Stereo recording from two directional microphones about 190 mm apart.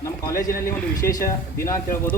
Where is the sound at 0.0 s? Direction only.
15° left (ahead or behind).